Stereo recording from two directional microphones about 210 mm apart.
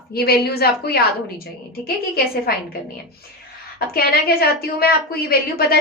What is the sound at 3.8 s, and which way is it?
A woman's voice, 45° left (ahead or behind).